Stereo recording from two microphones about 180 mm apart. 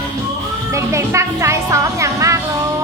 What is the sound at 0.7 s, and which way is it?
Speech, 15° right (ahead or behind).